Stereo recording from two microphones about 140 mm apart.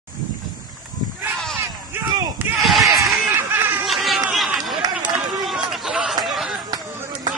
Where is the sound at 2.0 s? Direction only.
15° right (ahead or behind).